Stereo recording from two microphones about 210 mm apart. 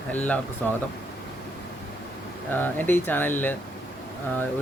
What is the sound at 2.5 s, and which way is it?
Speech, 10° left (ahead or behind).